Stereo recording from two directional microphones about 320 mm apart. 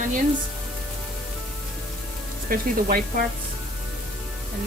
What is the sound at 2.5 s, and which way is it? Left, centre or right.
Speech, right.